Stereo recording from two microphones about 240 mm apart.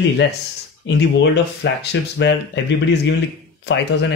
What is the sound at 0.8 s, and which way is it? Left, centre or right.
Speech, left.